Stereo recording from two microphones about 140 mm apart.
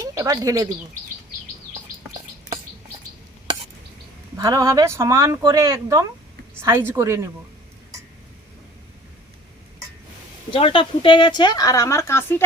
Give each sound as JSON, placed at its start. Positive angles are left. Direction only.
{"t": 0.0, "sound": "speech", "side_deg": -25}
{"t": 4.4, "sound": "speech", "side_deg": -25}
{"t": 10.5, "sound": "a woman's voice", "side_deg": 40}